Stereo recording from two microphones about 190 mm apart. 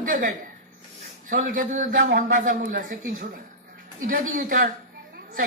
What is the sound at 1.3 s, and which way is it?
A woman's voice, 45° right (ahead or behind).